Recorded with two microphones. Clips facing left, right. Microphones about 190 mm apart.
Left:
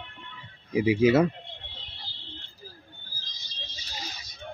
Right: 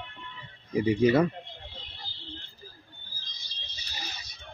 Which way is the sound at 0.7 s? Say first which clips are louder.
Left 2 dB; 5° left (ahead or behind).